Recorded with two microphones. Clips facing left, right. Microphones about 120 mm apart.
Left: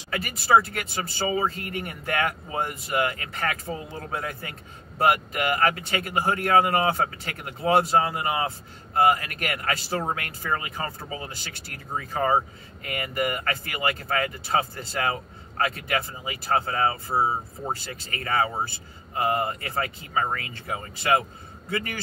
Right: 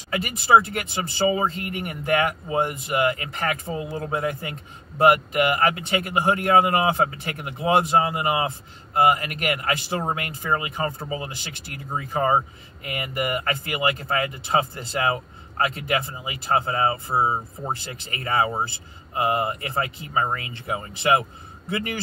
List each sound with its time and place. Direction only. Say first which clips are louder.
0.1 s speech: right 3 dB; 20° right (ahead or behind)